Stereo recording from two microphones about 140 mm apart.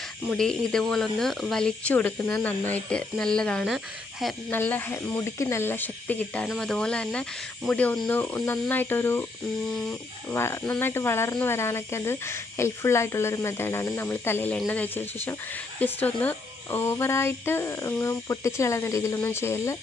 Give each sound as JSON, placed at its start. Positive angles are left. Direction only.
{"t": 0.3, "sound": "speech", "side_deg": 5}